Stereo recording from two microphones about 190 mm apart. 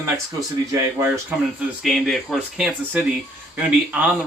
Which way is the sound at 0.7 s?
15° right (ahead or behind).